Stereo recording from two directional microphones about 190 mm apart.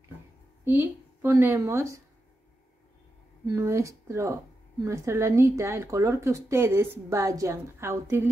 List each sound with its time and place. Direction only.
0.7 s a woman's voice: 10° right (ahead or behind)
3.4 s a woman's voice: 15° right (ahead or behind)